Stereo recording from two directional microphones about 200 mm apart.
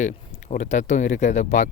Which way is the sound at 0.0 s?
35° left (ahead or behind).